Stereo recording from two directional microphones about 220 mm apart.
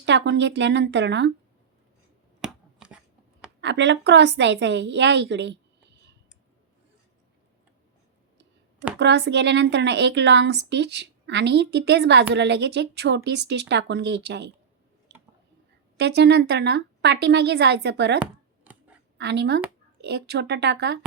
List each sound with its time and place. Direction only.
0.0 s a woman's voice: 50° right (ahead or behind)
2.4 s a sound: 5° right (ahead or behind)
3.6 s a woman's voice: 55° right (ahead or behind)
9.0 s a woman's voice: 50° right (ahead or behind)
16.0 s a woman's voice: 50° right (ahead or behind)
18.2 s a sound: 5° right (ahead or behind)
19.1 s a woman's voice: 50° right (ahead or behind)